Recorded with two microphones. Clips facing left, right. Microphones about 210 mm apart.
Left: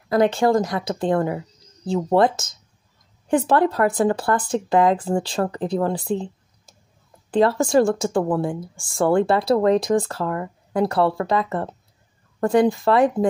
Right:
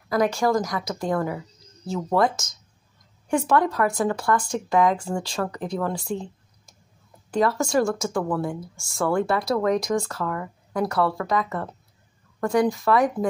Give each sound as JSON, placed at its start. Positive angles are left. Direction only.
{"t": 0.1, "sound": "speech", "side_deg": 30}